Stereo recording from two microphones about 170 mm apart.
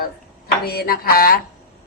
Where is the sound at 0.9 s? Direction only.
60° left (ahead or behind).